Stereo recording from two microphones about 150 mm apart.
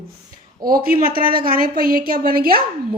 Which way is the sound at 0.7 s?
75° right (ahead or behind).